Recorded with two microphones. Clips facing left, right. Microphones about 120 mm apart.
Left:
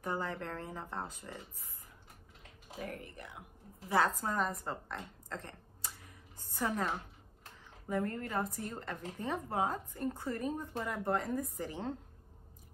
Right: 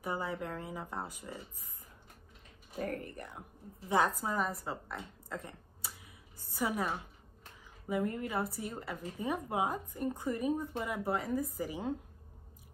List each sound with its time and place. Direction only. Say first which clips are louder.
0.0 s a woman's voice: right 1 dB; 10° right (ahead or behind)
2.8 s speech: right 6 dB; 45° right (ahead or behind)
4.2 s a woman's voice: even; 5° right (ahead or behind)